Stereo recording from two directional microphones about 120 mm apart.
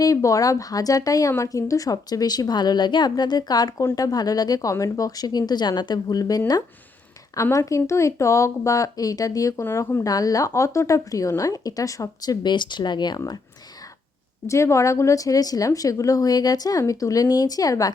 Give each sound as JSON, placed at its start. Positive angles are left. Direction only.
{"t": 0.0, "sound": "a woman's voice", "side_deg": 25}
{"t": 14.4, "sound": "speech", "side_deg": 25}